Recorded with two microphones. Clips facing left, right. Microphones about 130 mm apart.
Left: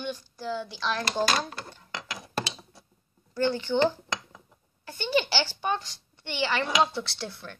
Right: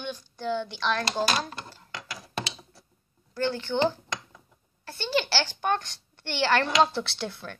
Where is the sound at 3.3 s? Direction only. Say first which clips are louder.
Left 2 dB; 15° left (ahead or behind).